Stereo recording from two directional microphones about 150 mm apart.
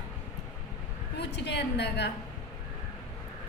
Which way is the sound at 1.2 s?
90° left.